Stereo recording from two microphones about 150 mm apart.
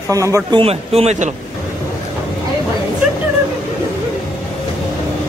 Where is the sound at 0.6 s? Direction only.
40° right (ahead or behind).